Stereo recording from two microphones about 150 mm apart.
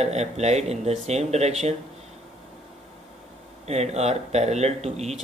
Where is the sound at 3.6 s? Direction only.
45° right (ahead or behind).